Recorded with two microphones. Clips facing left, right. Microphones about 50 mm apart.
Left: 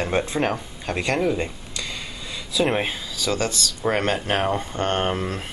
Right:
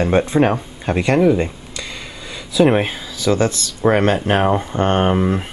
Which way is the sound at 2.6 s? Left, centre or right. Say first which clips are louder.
Right 8 dB; centre.